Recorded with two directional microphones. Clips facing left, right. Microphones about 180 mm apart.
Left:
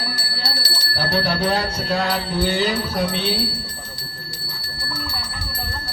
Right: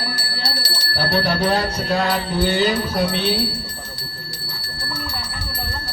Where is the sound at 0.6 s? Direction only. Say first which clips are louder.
Right 2 dB; 50° right (ahead or behind).